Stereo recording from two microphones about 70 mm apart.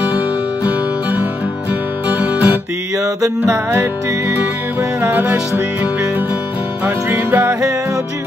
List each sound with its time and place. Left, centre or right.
2.1 s guitar: right
3.0 s music: right
5.1 s music: right
7.2 s music: right